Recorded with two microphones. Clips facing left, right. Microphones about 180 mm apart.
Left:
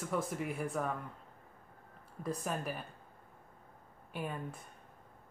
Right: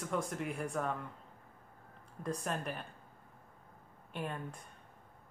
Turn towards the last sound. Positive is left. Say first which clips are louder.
# left 1 dB
turn(degrees=5)  # may be behind; listen again after turning